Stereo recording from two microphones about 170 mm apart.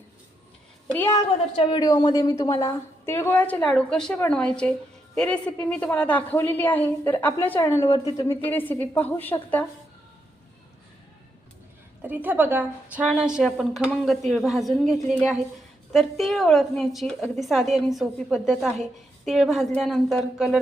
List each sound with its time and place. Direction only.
0.9 s a woman's voice: 15° left (ahead or behind)
1.5 s a woman's voice: 25° left (ahead or behind); by 9.6 s 10° left (ahead or behind)
12.0 s a woman's voice: 10° right (ahead or behind)